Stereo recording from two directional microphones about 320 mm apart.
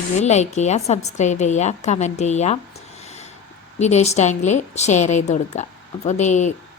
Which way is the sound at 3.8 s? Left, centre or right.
Left.